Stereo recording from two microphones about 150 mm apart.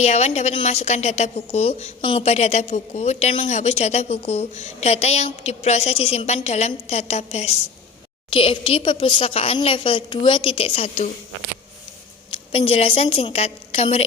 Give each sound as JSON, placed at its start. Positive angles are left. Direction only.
{"t": 0.0, "sound": "a woman's voice", "side_deg": 45}
{"t": 8.3, "sound": "a woman's voice", "side_deg": 35}
{"t": 12.3, "sound": "a woman's voice", "side_deg": 40}